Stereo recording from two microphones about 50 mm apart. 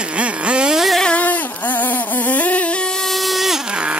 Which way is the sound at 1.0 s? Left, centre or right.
Left.